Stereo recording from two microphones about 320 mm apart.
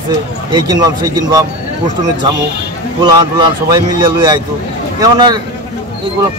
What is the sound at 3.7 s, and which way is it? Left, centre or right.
A man's voice, centre.